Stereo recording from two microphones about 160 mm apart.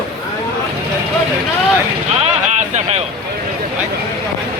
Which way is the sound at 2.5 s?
45° right (ahead or behind).